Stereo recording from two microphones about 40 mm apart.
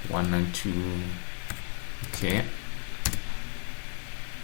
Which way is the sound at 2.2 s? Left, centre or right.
Centre.